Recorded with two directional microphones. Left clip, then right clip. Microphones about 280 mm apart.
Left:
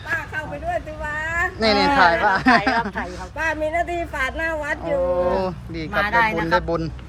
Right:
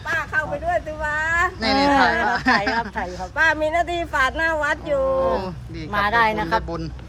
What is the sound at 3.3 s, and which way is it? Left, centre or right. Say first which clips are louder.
Speech: right 4 dB; centre.